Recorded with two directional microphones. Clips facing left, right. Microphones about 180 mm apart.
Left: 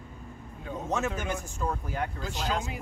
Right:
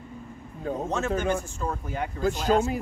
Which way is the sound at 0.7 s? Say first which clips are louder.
Right 7 dB; 45° right (ahead or behind).